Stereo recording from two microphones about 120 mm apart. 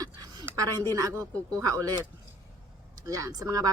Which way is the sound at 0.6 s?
30° right (ahead or behind).